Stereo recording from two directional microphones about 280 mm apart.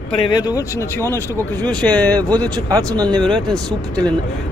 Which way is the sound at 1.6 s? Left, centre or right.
Centre.